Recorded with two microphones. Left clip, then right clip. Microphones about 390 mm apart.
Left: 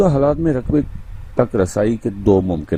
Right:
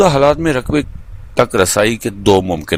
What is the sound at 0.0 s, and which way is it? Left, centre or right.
Speech, right.